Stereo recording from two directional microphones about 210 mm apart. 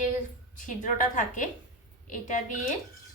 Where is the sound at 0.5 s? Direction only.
35° left (ahead or behind).